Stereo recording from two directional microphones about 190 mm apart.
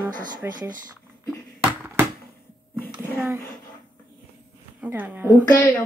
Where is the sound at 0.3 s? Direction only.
20° right (ahead or behind).